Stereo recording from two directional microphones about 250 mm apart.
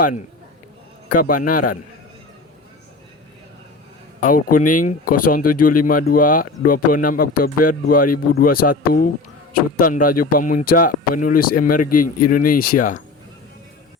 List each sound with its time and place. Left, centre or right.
1.1 s speech: left
4.2 s a man's voice: left